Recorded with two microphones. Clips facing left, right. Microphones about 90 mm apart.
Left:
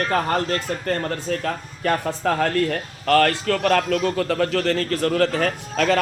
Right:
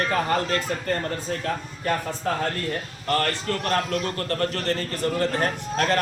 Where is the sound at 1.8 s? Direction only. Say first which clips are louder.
Left 6 dB; 75° left (ahead or behind).